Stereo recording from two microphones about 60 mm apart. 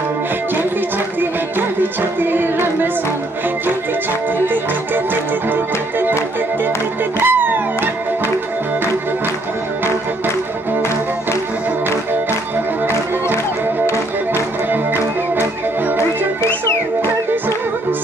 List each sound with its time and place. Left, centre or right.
1.2 s music: right
5.5 s music: right
7.2 s music: right
16.6 s music: left